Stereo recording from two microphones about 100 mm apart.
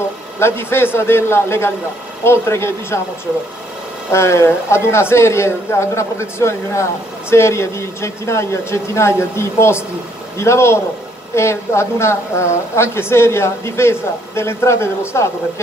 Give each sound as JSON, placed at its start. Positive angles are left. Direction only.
{"t": 0.4, "sound": "speech", "side_deg": 25}
{"t": 4.1, "sound": "speech", "side_deg": 30}